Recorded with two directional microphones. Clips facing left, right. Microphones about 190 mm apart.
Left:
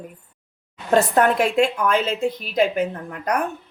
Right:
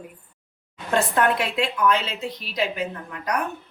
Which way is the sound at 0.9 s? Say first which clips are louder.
Left 4 dB; 45° left (ahead or behind).